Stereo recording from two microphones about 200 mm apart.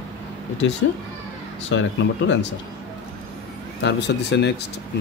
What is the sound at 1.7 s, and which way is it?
Speech, 70° left (ahead or behind).